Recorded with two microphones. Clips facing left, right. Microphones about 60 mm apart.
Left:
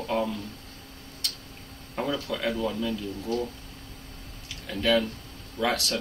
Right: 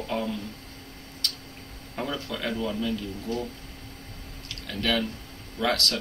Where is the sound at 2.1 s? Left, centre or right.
Centre.